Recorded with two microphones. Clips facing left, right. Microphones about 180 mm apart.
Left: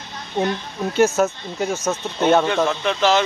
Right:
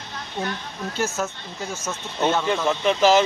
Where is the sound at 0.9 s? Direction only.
65° left (ahead or behind).